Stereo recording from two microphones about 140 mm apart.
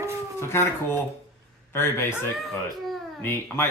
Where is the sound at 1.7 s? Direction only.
20° left (ahead or behind).